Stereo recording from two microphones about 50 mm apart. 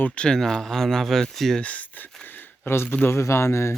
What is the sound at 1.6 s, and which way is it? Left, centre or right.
Speech, left.